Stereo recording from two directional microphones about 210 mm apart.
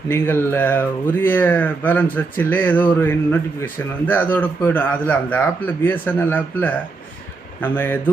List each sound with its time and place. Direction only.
0.1 s a man's voice: 10° left (ahead or behind)